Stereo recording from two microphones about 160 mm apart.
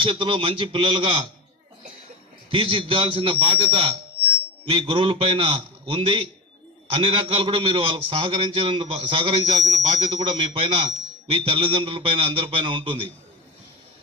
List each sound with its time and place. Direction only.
0.0 s a man's voice: 30° right (ahead or behind)
2.5 s a man's voice: 30° right (ahead or behind)
9.6 s a sound: 25° right (ahead or behind)
10.1 s a man's voice: 30° right (ahead or behind)